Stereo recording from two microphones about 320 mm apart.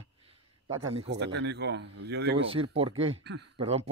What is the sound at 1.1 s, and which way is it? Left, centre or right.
Speech, right.